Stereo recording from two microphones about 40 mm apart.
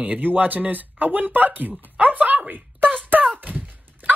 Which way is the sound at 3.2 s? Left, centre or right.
Right.